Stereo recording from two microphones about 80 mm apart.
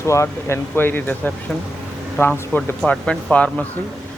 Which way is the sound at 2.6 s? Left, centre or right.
Centre.